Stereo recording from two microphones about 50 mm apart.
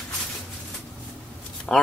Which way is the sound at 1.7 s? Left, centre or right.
Centre.